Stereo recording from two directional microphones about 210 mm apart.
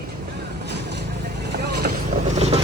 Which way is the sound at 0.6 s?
55° right (ahead or behind).